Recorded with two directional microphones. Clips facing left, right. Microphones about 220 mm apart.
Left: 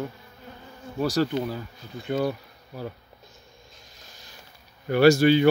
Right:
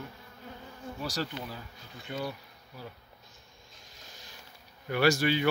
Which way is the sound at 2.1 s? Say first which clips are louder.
Left 10 dB; 50° left (ahead or behind).